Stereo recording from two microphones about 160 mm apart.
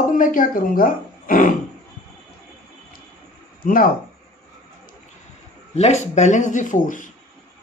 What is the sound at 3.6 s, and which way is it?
Speech, 60° left (ahead or behind).